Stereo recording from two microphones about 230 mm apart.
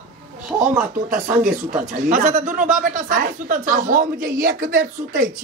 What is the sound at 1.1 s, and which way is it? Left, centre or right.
Speech, right.